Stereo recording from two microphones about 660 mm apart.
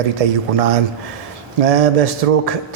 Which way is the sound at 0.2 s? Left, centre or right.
Right.